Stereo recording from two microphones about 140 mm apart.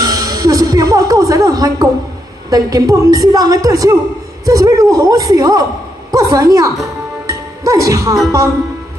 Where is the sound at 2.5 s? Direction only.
25° right (ahead or behind).